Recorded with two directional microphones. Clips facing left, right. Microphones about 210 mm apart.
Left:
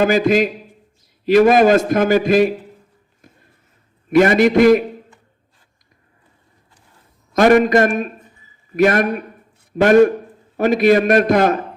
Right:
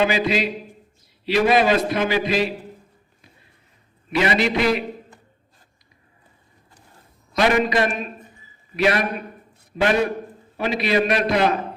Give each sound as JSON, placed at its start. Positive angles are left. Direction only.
{"t": 0.0, "sound": "a man's voice", "side_deg": 45}
{"t": 3.2, "sound": "a sound", "side_deg": 50}
{"t": 4.1, "sound": "a man's voice", "side_deg": 50}
{"t": 7.3, "sound": "a man's voice", "side_deg": 50}